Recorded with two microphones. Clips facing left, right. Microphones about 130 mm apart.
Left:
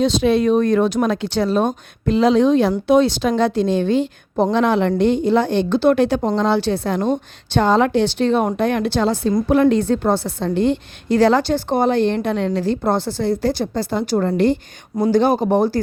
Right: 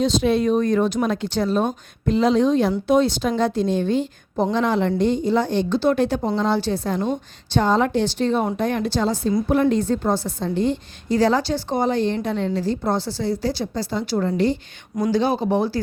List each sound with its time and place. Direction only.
0.0 s a woman's voice: 80° left
9.5 s a woman's voice: 85° left; by 15.8 s 50° left (ahead or behind)